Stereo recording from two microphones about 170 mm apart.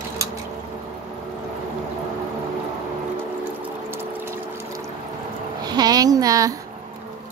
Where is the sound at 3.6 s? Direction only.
15° right (ahead or behind).